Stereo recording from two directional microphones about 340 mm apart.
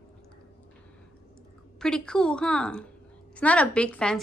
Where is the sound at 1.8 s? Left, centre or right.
Centre.